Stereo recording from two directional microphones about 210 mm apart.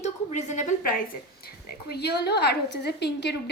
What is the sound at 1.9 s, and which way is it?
A woman's voice, 50° left (ahead or behind).